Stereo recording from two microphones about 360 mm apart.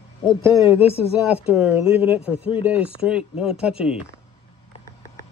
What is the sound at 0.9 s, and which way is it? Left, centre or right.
Speech, centre.